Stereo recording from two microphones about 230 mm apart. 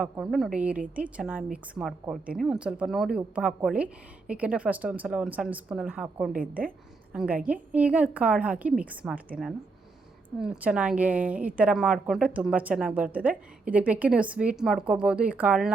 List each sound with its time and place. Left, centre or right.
0.0 s a woman's voice: centre
6.3 s a woman's voice: right
7.1 s a woman's voice: centre
10.4 s a woman's voice: centre